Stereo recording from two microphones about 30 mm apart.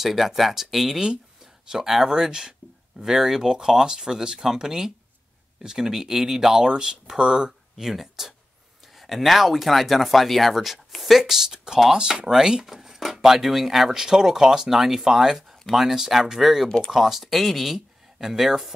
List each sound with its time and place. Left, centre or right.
0.0 s speech: centre
1.4 s speech: centre
7.8 s speech: centre
13.8 s speech: centre
16.6 s speech: centre
16.9 s speech: centre